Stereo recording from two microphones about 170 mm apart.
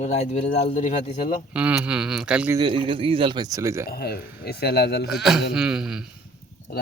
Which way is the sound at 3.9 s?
65° left (ahead or behind).